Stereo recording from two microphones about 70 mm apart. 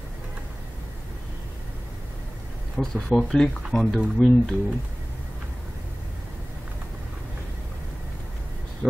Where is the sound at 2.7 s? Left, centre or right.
Centre.